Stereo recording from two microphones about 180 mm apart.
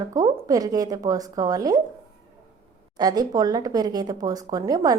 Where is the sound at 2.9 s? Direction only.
20° right (ahead or behind).